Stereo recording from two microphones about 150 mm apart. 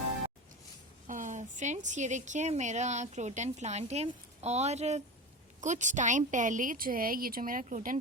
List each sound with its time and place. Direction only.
1.0 s a woman's voice: 55° right (ahead or behind)